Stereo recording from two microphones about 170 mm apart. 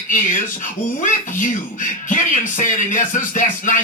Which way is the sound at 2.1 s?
50° left (ahead or behind).